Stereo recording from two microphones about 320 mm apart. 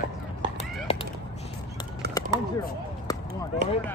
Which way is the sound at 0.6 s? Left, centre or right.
Centre.